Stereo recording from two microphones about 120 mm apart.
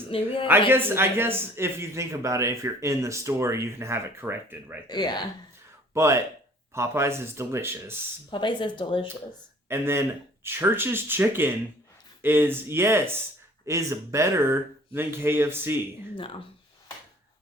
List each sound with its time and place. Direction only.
0.1 s a woman's voice: 55° left (ahead or behind)
0.7 s speech: 20° right (ahead or behind)
4.9 s speech: 35° left (ahead or behind)
5.9 s speech: 25° right (ahead or behind)
8.3 s speech: 40° left (ahead or behind)
9.6 s speech: 20° right (ahead or behind)